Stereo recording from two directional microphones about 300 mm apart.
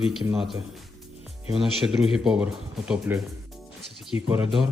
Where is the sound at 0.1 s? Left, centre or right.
Centre.